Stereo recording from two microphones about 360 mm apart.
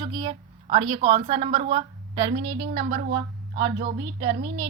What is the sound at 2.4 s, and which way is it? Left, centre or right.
A woman's voice, right.